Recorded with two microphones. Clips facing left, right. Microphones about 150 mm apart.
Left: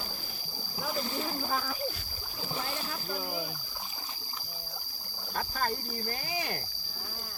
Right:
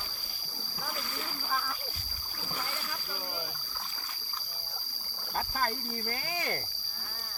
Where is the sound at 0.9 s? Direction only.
30° left (ahead or behind).